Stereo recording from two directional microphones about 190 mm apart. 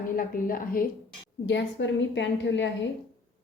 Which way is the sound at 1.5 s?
70° left (ahead or behind).